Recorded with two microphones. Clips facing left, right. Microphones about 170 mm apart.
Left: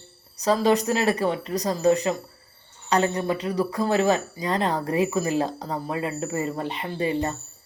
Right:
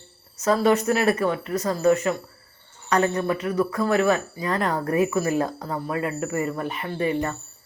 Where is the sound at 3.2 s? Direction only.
35° left (ahead or behind).